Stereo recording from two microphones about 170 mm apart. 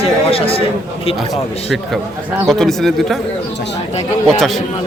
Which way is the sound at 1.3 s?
Centre (ahead or behind).